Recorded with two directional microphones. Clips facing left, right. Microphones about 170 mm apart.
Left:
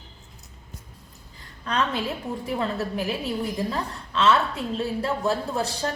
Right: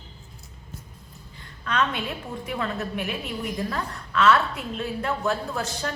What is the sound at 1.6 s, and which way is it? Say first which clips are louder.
A woman's voice: left 1 dB; 35° left (ahead or behind).